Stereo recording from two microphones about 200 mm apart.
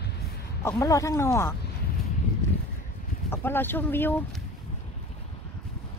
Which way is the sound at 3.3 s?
10° left (ahead or behind).